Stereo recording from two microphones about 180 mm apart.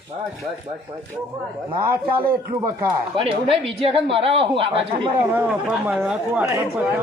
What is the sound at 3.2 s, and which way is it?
Speech, 30° right (ahead or behind).